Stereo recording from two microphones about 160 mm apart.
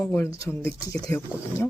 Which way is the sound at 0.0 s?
15° left (ahead or behind).